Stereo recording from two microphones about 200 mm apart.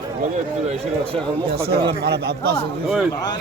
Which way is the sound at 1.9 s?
55° right (ahead or behind).